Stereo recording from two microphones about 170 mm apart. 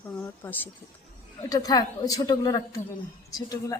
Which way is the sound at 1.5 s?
20° left (ahead or behind).